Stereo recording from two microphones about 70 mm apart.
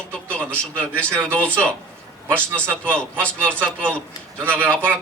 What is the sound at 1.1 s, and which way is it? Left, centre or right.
A man's voice, right.